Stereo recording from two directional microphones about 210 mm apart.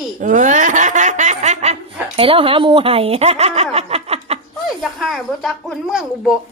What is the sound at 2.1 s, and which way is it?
Speech, 25° right (ahead or behind).